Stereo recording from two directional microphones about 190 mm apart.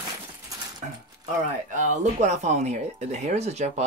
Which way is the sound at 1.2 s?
40° right (ahead or behind).